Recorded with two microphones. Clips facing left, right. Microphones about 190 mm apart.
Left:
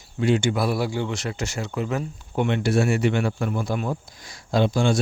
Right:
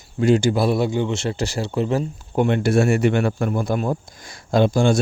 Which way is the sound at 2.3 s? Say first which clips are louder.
Right 4 dB; 45° right (ahead or behind).